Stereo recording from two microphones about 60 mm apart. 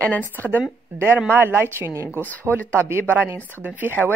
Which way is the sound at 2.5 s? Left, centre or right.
Right.